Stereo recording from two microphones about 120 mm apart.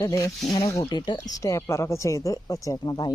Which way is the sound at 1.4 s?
25° left (ahead or behind).